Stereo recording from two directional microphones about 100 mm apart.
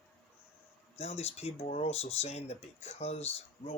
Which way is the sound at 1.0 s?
90° left.